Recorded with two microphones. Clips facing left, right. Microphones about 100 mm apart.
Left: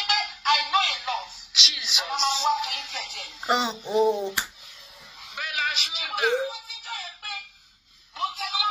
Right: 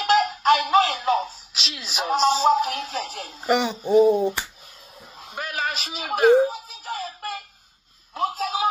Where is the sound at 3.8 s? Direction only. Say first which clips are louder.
Right 9 dB; 45° right (ahead or behind).